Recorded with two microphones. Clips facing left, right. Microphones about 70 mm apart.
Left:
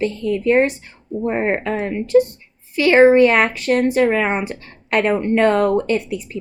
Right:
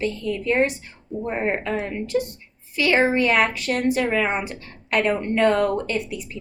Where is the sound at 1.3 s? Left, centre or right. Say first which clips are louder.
Left 4 dB; left.